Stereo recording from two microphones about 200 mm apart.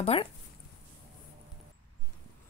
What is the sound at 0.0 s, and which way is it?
Speech, 30° left (ahead or behind).